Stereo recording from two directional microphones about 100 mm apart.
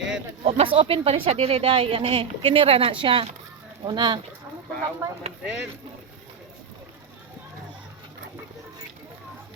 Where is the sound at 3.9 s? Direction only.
50° right (ahead or behind).